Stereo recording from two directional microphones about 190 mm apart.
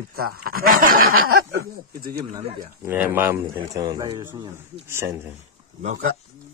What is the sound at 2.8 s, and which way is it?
Speech, 10° right (ahead or behind).